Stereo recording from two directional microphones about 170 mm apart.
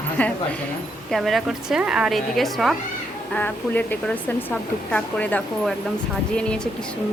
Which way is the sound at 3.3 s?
10° left (ahead or behind).